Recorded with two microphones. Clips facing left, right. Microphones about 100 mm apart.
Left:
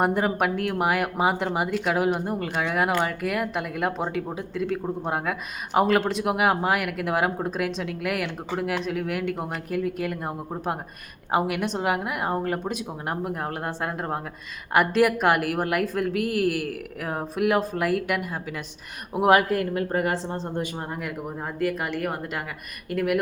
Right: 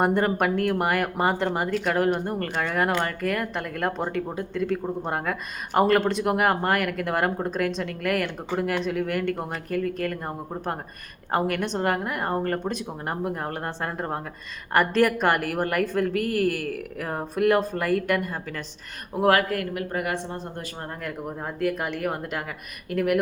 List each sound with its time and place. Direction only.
0.0 s speech: centre (ahead or behind)
19.1 s speech: 20° left (ahead or behind)
21.0 s speech: centre (ahead or behind)